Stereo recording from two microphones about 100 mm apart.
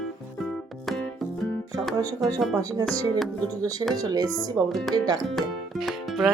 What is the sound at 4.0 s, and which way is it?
Speech, 40° right (ahead or behind).